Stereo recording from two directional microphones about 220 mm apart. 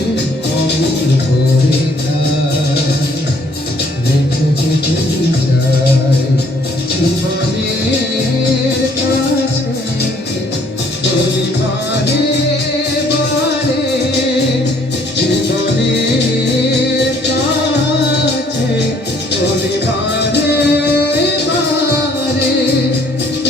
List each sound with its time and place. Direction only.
20.1 s music: 50° left (ahead or behind)